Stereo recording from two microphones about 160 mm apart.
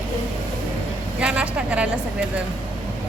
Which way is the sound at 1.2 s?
5° right (ahead or behind).